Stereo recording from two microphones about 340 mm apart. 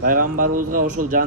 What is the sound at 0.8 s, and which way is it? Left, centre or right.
Speech, right.